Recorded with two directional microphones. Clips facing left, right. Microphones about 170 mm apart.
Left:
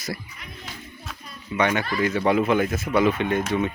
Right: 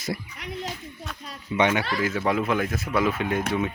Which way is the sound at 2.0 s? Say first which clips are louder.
Left 6 dB; centre (ahead or behind).